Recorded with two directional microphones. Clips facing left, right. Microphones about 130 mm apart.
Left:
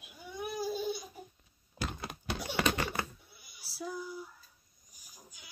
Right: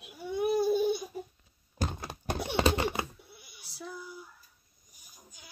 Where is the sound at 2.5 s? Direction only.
25° right (ahead or behind).